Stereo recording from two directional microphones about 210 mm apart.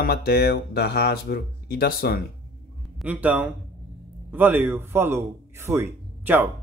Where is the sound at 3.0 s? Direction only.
5° right (ahead or behind).